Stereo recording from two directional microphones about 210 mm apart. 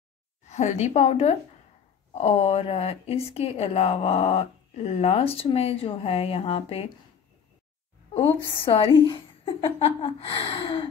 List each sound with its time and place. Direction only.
0.5 s a woman's voice: 35° left (ahead or behind)
8.6 s a woman's voice: 25° left (ahead or behind)